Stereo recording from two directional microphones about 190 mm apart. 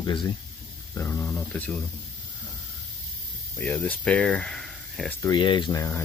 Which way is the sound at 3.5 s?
5° left (ahead or behind).